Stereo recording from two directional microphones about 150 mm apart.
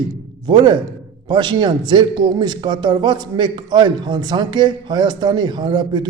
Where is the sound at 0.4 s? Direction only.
30° right (ahead or behind).